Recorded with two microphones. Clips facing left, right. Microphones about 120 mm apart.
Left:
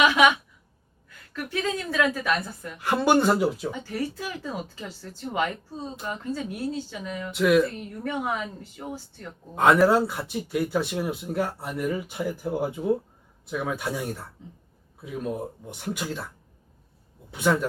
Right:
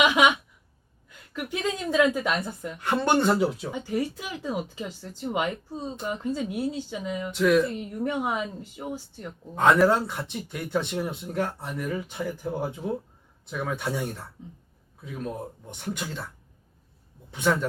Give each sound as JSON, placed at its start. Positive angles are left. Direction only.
{"t": 0.0, "sound": "speech", "side_deg": -15}
{"t": 2.7, "sound": "speech", "side_deg": 5}
{"t": 3.7, "sound": "speech", "side_deg": -15}
{"t": 7.3, "sound": "speech", "side_deg": 5}
{"t": 7.6, "sound": "speech", "side_deg": -15}
{"t": 9.6, "sound": "speech", "side_deg": 5}
{"t": 17.3, "sound": "speech", "side_deg": 5}